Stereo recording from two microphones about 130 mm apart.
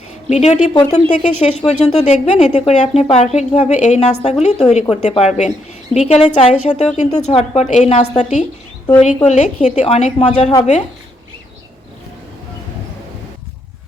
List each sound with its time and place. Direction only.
0.3 s a woman's voice: 60° left (ahead or behind)
0.7 s speech: 30° left (ahead or behind)
1.2 s a woman's voice: 60° left (ahead or behind)